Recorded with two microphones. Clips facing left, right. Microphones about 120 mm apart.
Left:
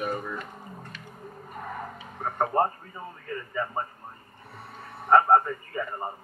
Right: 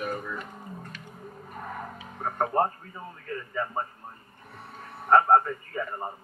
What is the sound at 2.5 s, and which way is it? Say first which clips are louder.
Speech: left 1 dB; 15° left (ahead or behind).